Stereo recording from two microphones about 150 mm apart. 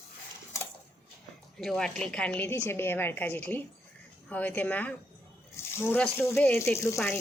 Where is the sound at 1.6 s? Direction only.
5° left (ahead or behind).